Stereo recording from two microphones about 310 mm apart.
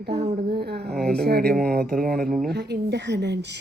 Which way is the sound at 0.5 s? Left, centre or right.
Right.